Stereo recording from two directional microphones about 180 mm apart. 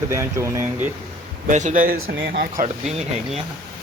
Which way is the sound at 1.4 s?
45° right (ahead or behind).